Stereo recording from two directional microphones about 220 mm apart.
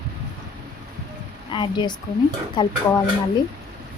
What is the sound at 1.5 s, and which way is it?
Speech, 20° left (ahead or behind).